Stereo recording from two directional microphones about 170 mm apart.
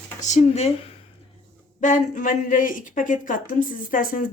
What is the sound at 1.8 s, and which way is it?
Speech, 50° left (ahead or behind).